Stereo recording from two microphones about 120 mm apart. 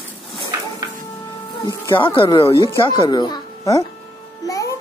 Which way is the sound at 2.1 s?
45° left (ahead or behind).